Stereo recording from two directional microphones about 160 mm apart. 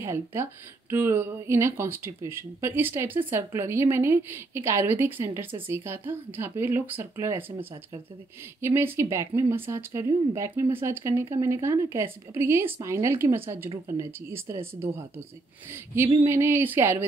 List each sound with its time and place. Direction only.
0.0 s speech: 15° right (ahead or behind)
8.5 s speech: 15° right (ahead or behind)